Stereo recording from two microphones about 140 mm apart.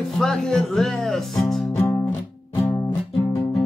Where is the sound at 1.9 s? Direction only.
20° left (ahead or behind).